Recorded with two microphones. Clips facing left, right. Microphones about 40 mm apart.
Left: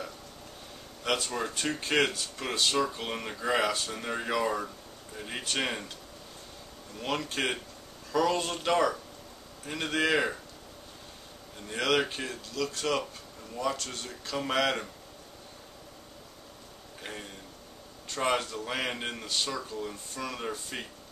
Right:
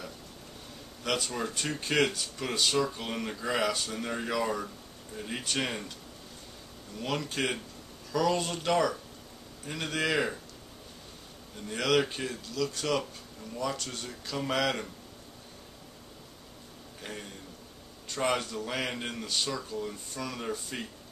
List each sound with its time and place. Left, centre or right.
1.0 s speech: centre
7.0 s speech: centre
11.6 s a man's voice: centre
17.0 s a man's voice: centre